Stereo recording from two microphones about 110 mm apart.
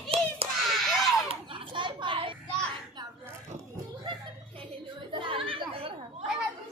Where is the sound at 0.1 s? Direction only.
60° right (ahead or behind).